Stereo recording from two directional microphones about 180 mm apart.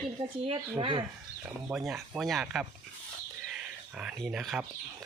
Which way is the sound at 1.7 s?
Centre (ahead or behind).